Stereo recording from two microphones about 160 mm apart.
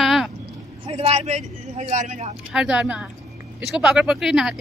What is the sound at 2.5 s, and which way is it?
Speech, 5° right (ahead or behind).